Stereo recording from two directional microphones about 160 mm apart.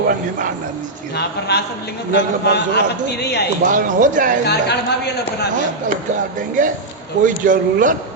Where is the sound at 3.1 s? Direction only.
90° left.